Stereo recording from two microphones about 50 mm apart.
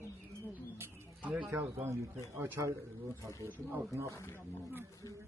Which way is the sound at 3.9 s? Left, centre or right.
Right.